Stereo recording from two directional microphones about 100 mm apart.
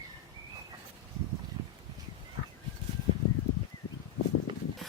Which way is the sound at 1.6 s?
50° right (ahead or behind).